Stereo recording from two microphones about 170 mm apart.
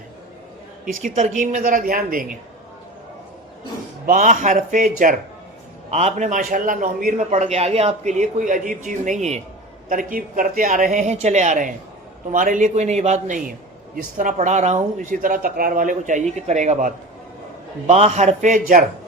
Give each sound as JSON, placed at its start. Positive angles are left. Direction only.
{"t": 1.0, "sound": "a man's voice", "side_deg": -45}
{"t": 4.0, "sound": "a man's voice", "side_deg": -50}
{"t": 9.9, "sound": "a man's voice", "side_deg": -55}